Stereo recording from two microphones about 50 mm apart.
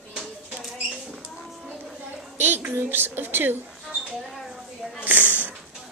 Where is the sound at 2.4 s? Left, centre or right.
Right.